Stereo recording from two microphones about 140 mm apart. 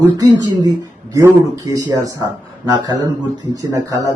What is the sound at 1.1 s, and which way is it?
A man's voice, 25° right (ahead or behind).